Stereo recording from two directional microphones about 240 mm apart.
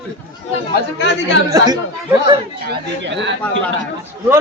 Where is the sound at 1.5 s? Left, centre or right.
Centre.